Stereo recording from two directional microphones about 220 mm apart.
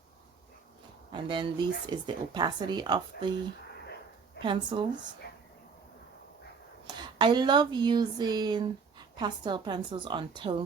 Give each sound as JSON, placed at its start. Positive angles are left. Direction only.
{"t": 1.1, "sound": "speech", "side_deg": -20}
{"t": 4.4, "sound": "a woman's voice", "side_deg": -20}
{"t": 5.2, "sound": "a sound", "side_deg": 45}
{"t": 6.8, "sound": "speech", "side_deg": -20}